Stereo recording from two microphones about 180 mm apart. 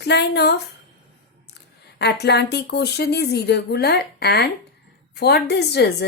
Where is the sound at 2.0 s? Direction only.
70° left (ahead or behind).